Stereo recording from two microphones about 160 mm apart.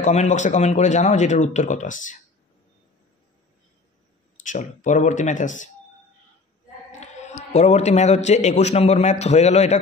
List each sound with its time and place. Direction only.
0.0 s speech: 45° left (ahead or behind)
4.4 s speech: 50° left (ahead or behind)
6.9 s a man's voice: 45° left (ahead or behind)